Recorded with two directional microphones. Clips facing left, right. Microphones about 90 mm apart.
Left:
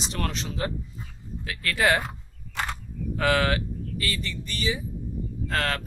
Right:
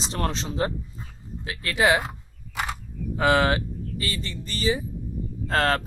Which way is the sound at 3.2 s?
25° right (ahead or behind).